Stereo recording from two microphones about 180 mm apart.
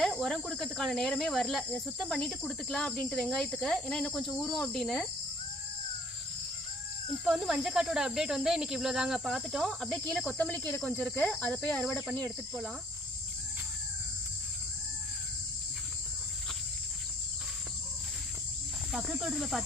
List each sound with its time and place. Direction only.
0.0 s speech: centre (ahead or behind)
7.3 s speech: centre (ahead or behind)
18.9 s speech: centre (ahead or behind)